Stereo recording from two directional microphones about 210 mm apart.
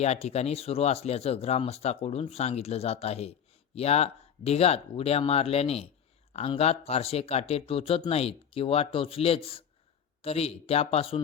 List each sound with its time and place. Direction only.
0.0 s speech: 30° left (ahead or behind)